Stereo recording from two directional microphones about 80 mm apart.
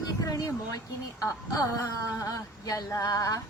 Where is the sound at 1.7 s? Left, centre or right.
Left.